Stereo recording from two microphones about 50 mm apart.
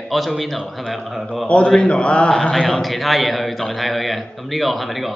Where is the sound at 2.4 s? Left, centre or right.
Centre.